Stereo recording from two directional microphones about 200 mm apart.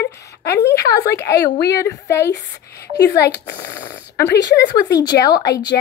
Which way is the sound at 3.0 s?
55° left (ahead or behind).